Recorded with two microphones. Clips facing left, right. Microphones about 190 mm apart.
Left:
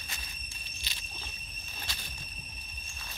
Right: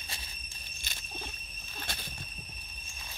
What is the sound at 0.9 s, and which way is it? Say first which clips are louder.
Cricket: right 1 dB; 50° right (ahead or behind).